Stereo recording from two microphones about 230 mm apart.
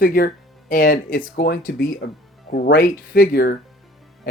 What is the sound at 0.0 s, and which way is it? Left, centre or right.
Speech, left.